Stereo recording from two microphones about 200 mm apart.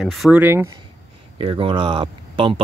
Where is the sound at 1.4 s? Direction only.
25° right (ahead or behind).